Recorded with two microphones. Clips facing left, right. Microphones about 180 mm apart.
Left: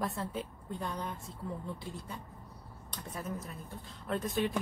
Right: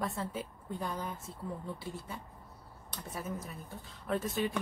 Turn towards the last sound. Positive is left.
turn(degrees=0)  # may be behind; listen again after turning